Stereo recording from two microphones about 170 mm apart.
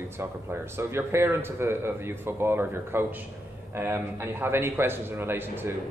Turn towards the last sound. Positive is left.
turn(degrees=-15)  # may be behind; listen again after turning